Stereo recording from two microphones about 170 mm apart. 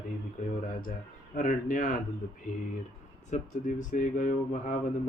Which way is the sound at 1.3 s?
50° left (ahead or behind).